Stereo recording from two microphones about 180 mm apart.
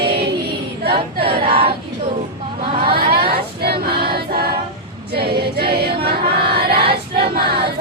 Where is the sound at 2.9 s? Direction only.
60° right (ahead or behind).